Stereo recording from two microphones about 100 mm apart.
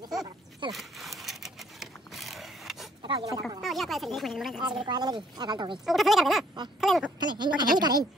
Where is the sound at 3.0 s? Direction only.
50° right (ahead or behind).